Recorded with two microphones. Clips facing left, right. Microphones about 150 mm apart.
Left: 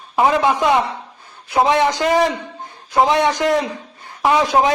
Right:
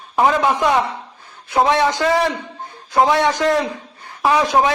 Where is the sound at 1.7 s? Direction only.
20° left (ahead or behind).